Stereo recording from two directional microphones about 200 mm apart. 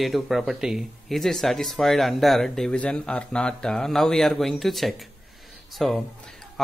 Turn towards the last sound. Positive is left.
turn(degrees=5)  # may be behind; listen again after turning